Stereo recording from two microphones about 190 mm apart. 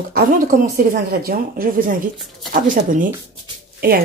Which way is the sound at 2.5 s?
45° right (ahead or behind).